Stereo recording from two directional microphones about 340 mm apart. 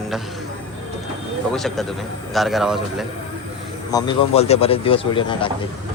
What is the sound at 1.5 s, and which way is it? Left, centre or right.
A man's voice, centre.